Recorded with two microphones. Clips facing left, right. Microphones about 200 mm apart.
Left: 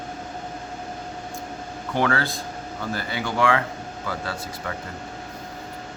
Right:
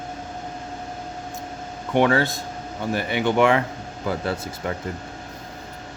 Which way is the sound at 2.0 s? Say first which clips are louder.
Right 4 dB; 20° right (ahead or behind).